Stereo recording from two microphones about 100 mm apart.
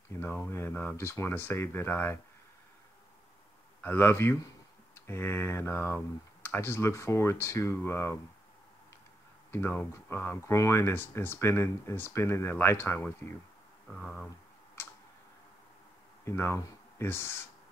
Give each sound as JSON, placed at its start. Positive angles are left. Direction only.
{"t": 0.2, "sound": "speech", "side_deg": 20}
{"t": 3.8, "sound": "speech", "side_deg": 20}
{"t": 9.5, "sound": "speech", "side_deg": 20}
{"t": 13.8, "sound": "speech", "side_deg": 10}
{"t": 16.3, "sound": "speech", "side_deg": 25}